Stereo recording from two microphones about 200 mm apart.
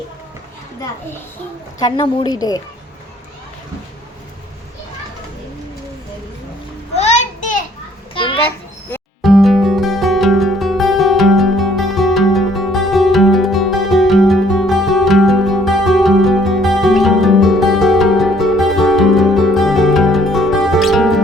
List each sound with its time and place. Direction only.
1.8 s a woman's voice: 20° left (ahead or behind)
6.9 s a sound: 35° left (ahead or behind)
8.1 s children playing: 25° left (ahead or behind)
9.2 s music: centre (ahead or behind)